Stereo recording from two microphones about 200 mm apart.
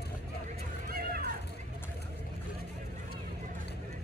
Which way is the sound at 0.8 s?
45° right (ahead or behind).